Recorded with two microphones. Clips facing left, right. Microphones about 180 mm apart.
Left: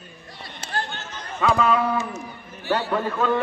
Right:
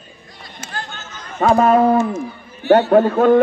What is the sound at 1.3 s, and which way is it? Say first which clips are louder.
A man's voice: right 7 dB; 45° right (ahead or behind).